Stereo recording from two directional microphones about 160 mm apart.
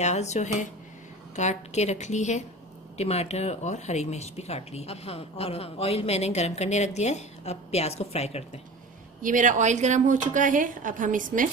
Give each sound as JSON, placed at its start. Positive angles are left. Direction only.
{"t": 0.0, "sound": "a woman's voice", "side_deg": 45}
{"t": 9.2, "sound": "a woman's voice", "side_deg": -55}